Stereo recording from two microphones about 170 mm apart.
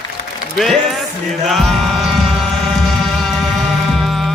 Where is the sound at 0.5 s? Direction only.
Centre (ahead or behind).